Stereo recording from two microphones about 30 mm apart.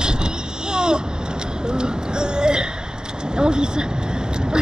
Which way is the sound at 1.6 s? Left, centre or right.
Right.